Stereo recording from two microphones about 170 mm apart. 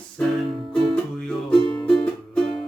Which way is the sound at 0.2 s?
5° left (ahead or behind).